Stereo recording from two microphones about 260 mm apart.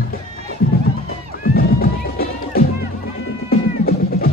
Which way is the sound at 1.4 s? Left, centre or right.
Left.